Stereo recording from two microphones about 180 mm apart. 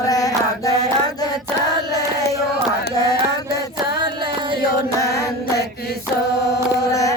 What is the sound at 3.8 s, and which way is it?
Music, 65° left (ahead or behind).